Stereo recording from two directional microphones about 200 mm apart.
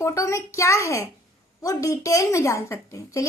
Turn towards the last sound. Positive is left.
turn(degrees=15)  # may be behind; listen again after turning